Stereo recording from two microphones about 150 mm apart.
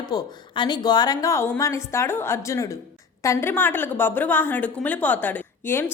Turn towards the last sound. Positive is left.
turn(degrees=15)  # may be behind; listen again after turning